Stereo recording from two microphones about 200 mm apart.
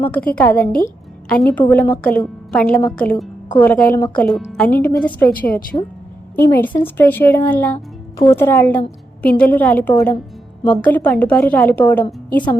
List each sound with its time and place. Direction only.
0.0 s a woman's voice: 5° left (ahead or behind)
0.5 s a woman's voice: 50° left (ahead or behind)
1.3 s a woman's voice: 5° left (ahead or behind)